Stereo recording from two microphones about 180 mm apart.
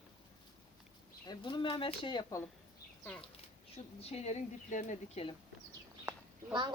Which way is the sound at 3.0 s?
5° left (ahead or behind).